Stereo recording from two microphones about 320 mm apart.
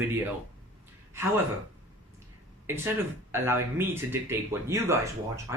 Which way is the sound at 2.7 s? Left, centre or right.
Centre.